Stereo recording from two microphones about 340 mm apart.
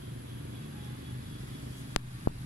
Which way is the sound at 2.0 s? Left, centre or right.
Left.